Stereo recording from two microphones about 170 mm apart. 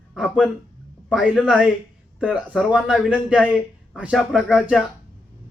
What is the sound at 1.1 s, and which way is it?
A man's voice, 5° right (ahead or behind).